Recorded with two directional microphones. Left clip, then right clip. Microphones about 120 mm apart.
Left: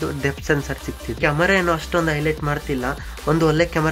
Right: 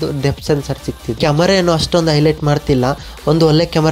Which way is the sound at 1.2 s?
45° right (ahead or behind).